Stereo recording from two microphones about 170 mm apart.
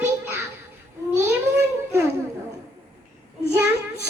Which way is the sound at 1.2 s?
15° right (ahead or behind).